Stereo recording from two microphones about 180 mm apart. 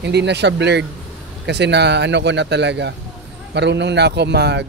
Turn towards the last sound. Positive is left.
turn(degrees=-70)  # may be behind; listen again after turning